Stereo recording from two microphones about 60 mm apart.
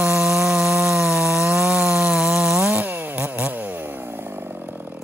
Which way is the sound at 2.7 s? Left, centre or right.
Right.